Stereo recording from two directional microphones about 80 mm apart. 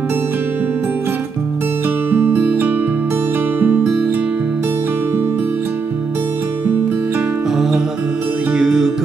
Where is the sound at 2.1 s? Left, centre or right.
Right.